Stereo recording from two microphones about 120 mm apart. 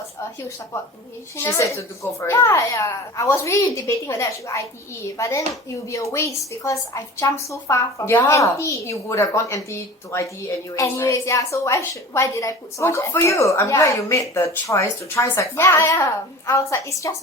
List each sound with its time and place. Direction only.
1.4 s a woman's voice: 20° left (ahead or behind)